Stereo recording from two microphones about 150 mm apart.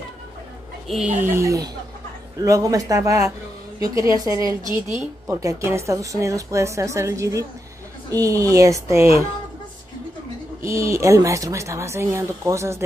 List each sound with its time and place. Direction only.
0.8 s speech: 5° right (ahead or behind)
1.3 s a woman's voice: 20° right (ahead or behind)
10.7 s a woman's voice: 20° right (ahead or behind)